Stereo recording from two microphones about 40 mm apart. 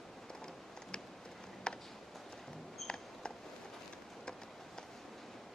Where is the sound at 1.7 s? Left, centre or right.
Left.